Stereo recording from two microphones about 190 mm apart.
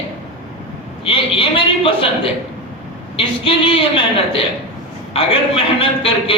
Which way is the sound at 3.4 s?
30° left (ahead or behind).